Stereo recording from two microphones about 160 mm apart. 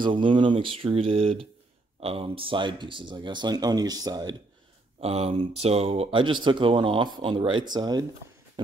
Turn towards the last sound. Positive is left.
turn(degrees=-25)  # may be behind; listen again after turning